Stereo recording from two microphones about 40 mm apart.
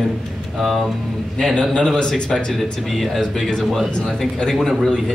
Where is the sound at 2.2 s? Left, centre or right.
Centre.